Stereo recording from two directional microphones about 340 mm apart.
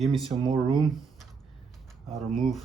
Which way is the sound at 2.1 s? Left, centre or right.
Centre.